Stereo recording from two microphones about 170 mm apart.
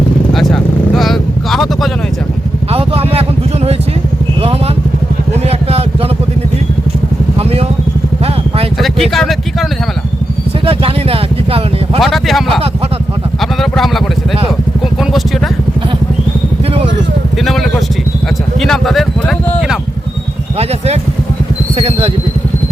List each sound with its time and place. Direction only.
0.3 s vehicle: centre (ahead or behind)
2.7 s vehicle: 35° right (ahead or behind)
8.8 s vehicle: centre (ahead or behind)
10.7 s vehicle: 35° right (ahead or behind)
11.9 s vehicle: centre (ahead or behind)
13.4 s a sound: centre (ahead or behind)
17.4 s vehicle: centre (ahead or behind)
18.6 s a sound: centre (ahead or behind)
20.6 s vehicle: 40° right (ahead or behind)